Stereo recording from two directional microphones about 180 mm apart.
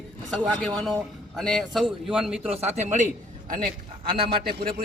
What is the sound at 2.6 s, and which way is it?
Speech, 40° right (ahead or behind).